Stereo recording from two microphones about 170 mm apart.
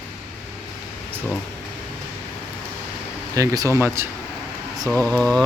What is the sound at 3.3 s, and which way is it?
Speech, 20° right (ahead or behind).